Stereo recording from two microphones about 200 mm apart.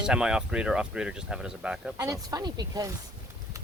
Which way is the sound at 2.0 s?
15° right (ahead or behind).